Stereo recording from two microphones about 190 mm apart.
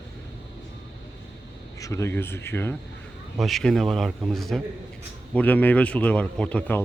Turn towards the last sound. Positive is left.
turn(degrees=10)  # may be behind; listen again after turning